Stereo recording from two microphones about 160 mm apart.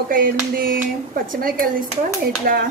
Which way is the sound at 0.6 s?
65° right (ahead or behind).